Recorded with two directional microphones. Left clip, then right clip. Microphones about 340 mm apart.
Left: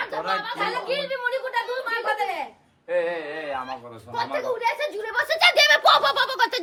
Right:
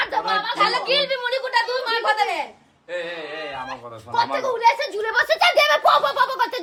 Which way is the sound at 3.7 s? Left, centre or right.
Centre.